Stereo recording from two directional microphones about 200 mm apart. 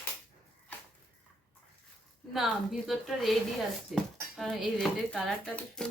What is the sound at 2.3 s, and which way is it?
A woman's voice, centre (ahead or behind).